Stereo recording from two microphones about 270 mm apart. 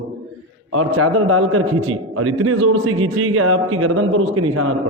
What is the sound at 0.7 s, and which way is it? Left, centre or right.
A man's voice, right.